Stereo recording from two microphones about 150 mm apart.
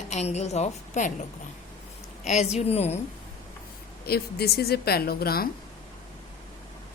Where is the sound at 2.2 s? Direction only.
45° left (ahead or behind).